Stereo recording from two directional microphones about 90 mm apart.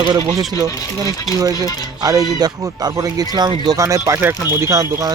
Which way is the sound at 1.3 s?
5° right (ahead or behind).